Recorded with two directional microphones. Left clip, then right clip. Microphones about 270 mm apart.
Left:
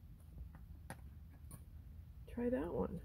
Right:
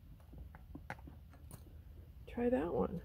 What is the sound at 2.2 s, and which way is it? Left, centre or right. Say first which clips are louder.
Speech: right 5 dB; centre.